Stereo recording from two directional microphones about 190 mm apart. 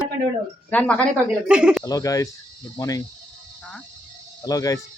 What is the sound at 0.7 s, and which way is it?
Speech, 5° left (ahead or behind).